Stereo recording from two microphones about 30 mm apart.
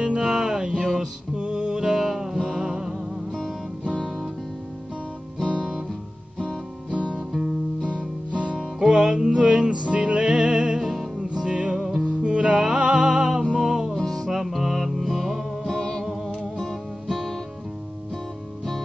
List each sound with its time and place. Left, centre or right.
0.2 s music: right
2.0 s music: centre
8.3 s music: right
8.7 s music: right
10.8 s music: centre
11.1 s music: right
13.9 s music: centre
14.2 s music: centre
15.6 s music: centre